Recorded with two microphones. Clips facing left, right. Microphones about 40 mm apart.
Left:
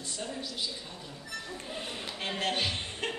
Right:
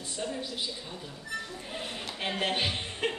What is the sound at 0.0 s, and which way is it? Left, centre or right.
Speech, centre.